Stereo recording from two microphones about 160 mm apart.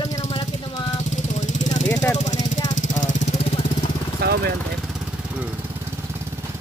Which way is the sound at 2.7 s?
50° left (ahead or behind).